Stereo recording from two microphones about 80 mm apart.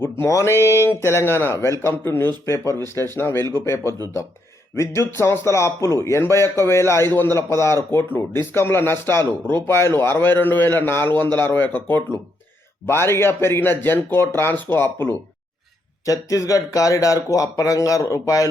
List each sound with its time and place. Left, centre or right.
0.0 s a man's voice: left
16.0 s speech: left